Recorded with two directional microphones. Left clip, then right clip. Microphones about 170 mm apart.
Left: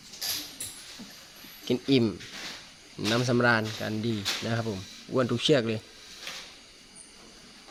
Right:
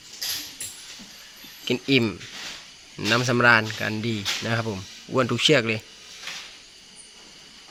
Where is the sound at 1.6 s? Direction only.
10° right (ahead or behind).